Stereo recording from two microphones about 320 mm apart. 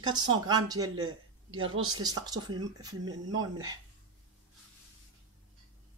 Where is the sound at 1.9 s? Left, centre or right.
Centre.